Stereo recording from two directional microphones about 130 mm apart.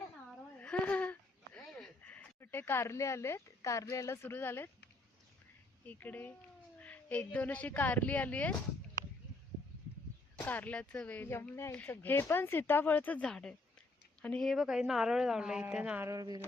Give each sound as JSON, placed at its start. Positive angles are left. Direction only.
{"t": 0.3, "sound": "a sound", "side_deg": 10}
{"t": 1.5, "sound": "speech", "side_deg": 5}
{"t": 5.8, "sound": "speech", "side_deg": 15}
{"t": 10.3, "sound": "a woman's voice", "side_deg": 10}
{"t": 16.0, "sound": "speech", "side_deg": -30}